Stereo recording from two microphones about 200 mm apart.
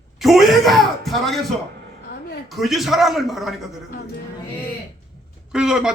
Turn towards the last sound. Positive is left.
turn(degrees=-5)  # may be behind; listen again after turning